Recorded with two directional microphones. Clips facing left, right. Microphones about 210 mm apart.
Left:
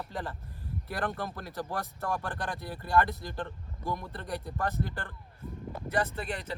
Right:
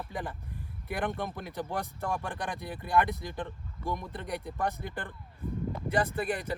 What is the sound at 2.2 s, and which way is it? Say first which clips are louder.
Speech: even; 15° right (ahead or behind).